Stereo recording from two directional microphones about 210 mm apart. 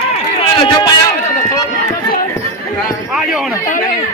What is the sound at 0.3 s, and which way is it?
Run, 20° left (ahead or behind).